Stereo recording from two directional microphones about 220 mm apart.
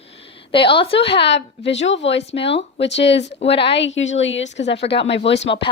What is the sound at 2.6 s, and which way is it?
Speech, 55° left (ahead or behind).